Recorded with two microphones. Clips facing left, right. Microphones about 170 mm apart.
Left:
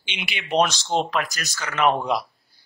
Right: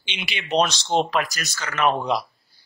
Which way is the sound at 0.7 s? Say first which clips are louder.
Even; 20° right (ahead or behind).